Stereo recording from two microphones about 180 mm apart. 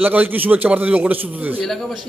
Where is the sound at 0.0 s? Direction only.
10° right (ahead or behind).